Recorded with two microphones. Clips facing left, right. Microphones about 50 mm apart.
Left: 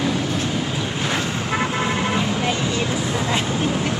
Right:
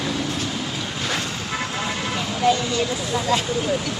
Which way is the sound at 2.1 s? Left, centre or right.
Left.